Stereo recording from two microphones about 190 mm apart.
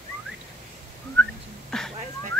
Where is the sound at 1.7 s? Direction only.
5° left (ahead or behind).